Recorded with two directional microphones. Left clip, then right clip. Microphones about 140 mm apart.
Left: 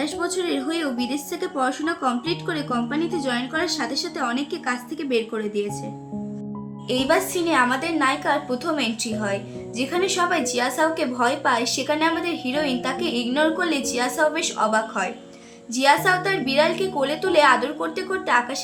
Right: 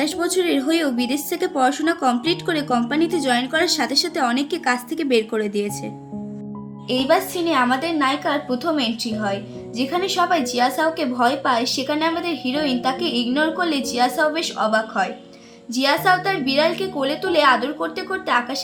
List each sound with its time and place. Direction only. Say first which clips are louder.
0.0 s a woman's voice: right 4 dB; 70° right (ahead or behind)
6.8 s a woman's voice: right 2 dB; centre (ahead or behind)